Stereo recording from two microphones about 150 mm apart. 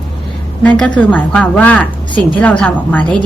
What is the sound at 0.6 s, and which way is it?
A woman's voice, 10° left (ahead or behind).